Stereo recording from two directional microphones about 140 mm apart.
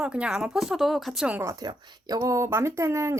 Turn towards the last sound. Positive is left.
turn(degrees=-20)  # may be behind; listen again after turning